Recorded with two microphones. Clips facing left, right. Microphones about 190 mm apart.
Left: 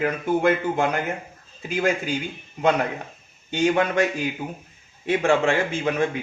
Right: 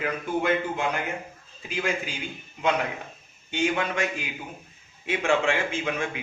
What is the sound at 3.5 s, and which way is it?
Speech, 40° left (ahead or behind).